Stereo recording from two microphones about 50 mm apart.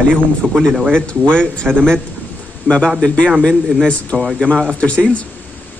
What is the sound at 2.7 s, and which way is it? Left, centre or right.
A man's voice, left.